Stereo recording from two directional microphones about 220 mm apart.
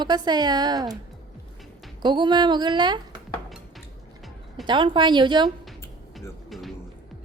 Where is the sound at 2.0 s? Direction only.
20° right (ahead or behind).